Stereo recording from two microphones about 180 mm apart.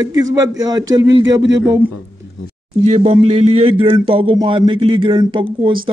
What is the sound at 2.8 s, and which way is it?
Speech, 35° right (ahead or behind).